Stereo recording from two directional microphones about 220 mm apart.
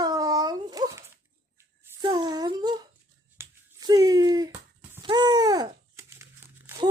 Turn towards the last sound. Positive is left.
turn(degrees=-15)  # may be behind; listen again after turning